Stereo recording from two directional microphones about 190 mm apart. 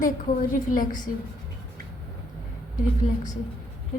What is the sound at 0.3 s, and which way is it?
Speech, 45° left (ahead or behind).